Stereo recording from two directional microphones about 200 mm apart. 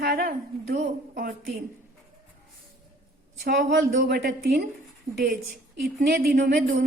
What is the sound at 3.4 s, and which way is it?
Speech, 60° right (ahead or behind).